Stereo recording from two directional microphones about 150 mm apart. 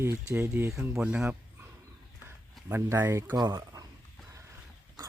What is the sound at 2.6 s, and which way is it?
Speech, 15° right (ahead or behind).